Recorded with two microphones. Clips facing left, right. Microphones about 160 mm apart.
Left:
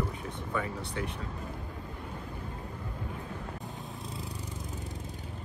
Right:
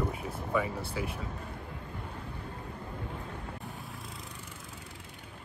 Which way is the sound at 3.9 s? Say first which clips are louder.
Left 4 dB; centre (ahead or behind).